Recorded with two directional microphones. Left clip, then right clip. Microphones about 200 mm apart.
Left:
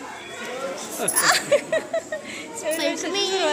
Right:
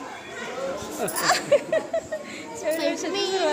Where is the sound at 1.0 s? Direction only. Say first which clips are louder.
Left 3 dB; centre (ahead or behind).